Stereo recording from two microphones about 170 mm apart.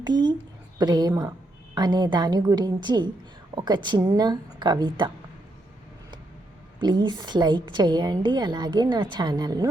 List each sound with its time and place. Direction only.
0.0 s a woman's voice: 25° right (ahead or behind)
6.7 s a woman's voice: 25° right (ahead or behind)